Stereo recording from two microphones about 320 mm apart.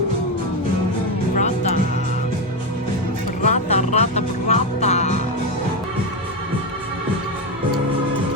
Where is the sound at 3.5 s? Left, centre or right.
Left.